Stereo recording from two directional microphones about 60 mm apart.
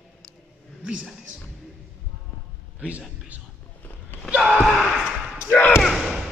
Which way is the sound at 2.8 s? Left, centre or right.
Right.